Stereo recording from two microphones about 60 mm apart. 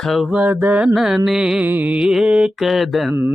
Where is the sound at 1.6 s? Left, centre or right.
Right.